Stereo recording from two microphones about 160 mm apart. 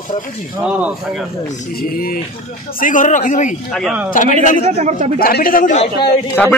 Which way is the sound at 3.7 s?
Centre (ahead or behind).